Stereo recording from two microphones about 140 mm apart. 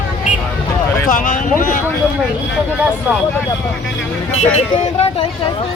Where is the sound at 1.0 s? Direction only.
75° left (ahead or behind).